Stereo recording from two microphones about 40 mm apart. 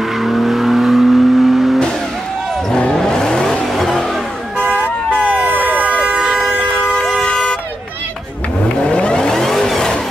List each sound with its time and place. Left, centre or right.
0.2 s vehicle: centre
3.0 s vehicle: centre
4.6 s vehicle: right
5.4 s emergency vehicle: right
7.2 s vehicle: left
8.8 s vehicle: left
9.3 s vehicle: centre